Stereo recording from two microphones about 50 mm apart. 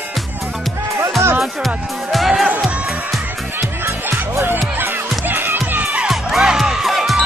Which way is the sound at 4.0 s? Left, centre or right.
Right.